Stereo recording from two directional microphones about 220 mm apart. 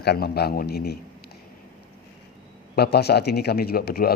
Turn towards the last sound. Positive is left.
turn(degrees=45)  # may be behind; listen again after turning